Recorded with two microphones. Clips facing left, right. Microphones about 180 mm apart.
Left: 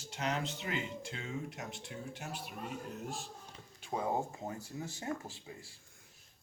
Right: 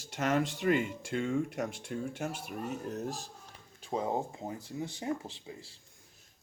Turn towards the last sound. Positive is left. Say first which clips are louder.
# right 4 dB
turn(degrees=-20)  # may be behind; listen again after turning